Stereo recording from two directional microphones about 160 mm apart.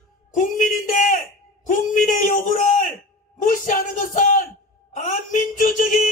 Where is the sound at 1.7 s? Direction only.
55° left (ahead or behind).